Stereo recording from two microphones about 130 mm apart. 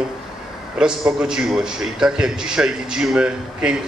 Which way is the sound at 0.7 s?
5° right (ahead or behind).